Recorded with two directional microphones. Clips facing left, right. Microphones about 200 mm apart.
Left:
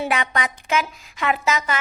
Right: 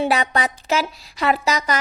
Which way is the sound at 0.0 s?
35° right (ahead or behind).